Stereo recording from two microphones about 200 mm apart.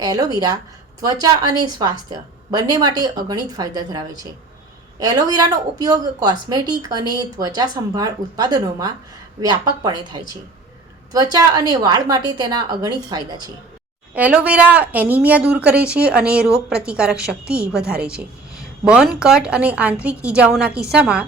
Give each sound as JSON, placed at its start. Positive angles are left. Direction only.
{"t": 0.0, "sound": "a woman's voice", "side_deg": -20}
{"t": 14.1, "sound": "a woman's voice", "side_deg": -5}